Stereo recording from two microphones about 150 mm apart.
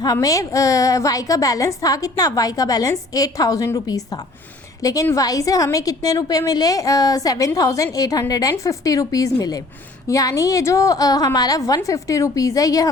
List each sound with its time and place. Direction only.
0.0 s a woman's voice: 25° left (ahead or behind)